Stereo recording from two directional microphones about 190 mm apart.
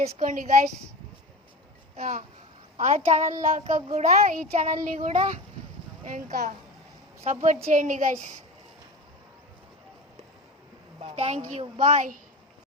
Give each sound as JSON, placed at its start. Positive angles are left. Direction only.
{"t": 0.0, "sound": "a woman's voice", "side_deg": -45}
{"t": 2.0, "sound": "a woman's voice", "side_deg": -45}
{"t": 11.0, "sound": "a child's voice", "side_deg": -30}